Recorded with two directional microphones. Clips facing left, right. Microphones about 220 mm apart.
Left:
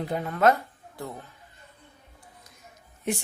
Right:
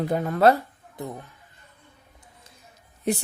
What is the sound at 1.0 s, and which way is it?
Speech, 20° right (ahead or behind).